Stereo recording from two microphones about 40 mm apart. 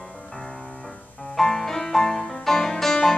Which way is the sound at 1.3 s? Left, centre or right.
Centre.